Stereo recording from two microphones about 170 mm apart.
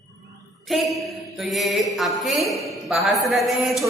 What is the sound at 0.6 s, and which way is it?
A woman's voice, centre (ahead or behind).